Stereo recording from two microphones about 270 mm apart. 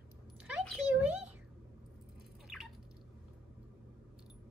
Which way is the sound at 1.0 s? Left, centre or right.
Centre.